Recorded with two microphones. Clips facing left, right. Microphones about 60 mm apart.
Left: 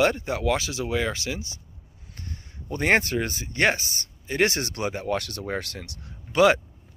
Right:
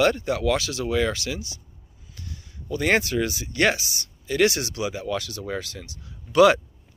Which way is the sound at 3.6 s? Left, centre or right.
Left.